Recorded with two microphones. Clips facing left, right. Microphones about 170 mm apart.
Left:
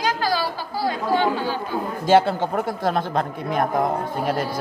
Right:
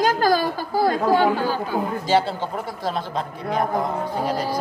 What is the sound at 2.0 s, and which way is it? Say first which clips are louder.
A man's voice: left 7 dB; 50° left (ahead or behind).